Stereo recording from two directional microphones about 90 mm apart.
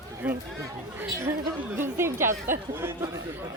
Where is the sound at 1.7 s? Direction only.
25° right (ahead or behind).